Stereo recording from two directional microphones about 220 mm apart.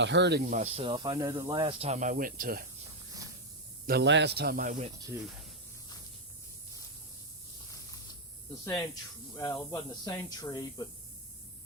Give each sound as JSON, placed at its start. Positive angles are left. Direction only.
{"t": 0.0, "sound": "speech", "side_deg": -50}
{"t": 0.5, "sound": "speech", "side_deg": -30}
{"t": 3.8, "sound": "speech", "side_deg": -50}
{"t": 8.6, "sound": "speech", "side_deg": 15}